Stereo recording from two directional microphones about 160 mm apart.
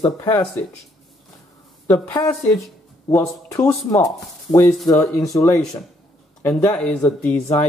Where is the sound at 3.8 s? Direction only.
20° left (ahead or behind).